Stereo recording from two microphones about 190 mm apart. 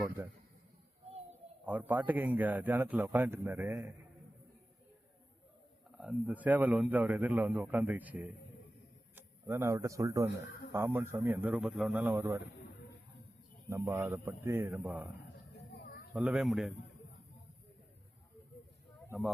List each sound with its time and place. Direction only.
0.2 s a man's voice: 15° right (ahead or behind)
1.6 s a man's voice: 10° right (ahead or behind)
6.0 s a man's voice: 5° right (ahead or behind)
13.7 s a man's voice: 15° right (ahead or behind)
15.5 s a sound: 55° left (ahead or behind)
16.1 s speech: 5° right (ahead or behind)